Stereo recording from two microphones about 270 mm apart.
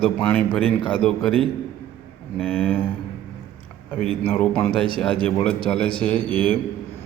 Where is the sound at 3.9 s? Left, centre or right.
Centre.